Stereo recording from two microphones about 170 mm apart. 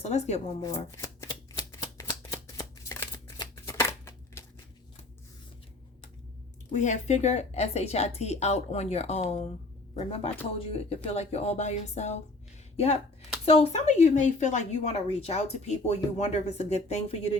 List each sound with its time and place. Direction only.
0.0 s a woman's voice: 40° left (ahead or behind)
0.9 s shuffling cards: 20° left (ahead or behind)
6.7 s a woman's voice: 45° left (ahead or behind)